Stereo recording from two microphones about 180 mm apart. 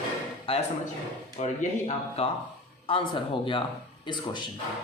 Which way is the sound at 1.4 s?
40° left (ahead or behind).